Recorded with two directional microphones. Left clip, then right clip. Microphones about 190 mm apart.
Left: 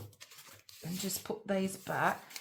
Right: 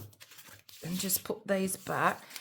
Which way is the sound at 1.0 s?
45° right (ahead or behind).